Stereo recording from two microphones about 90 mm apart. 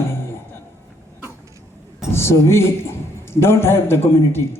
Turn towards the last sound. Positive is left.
turn(degrees=25)  # may be behind; listen again after turning